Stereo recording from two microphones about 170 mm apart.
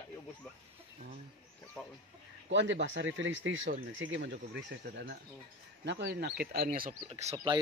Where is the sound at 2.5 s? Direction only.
90° right; by 6.9 s 60° right (ahead or behind).